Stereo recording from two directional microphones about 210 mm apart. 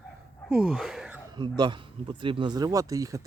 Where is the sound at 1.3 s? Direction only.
20° right (ahead or behind).